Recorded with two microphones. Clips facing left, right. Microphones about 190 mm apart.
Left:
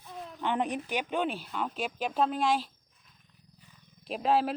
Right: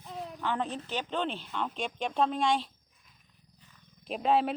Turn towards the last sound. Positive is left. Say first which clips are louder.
# even
turn(degrees=0)  # may be behind; listen again after turning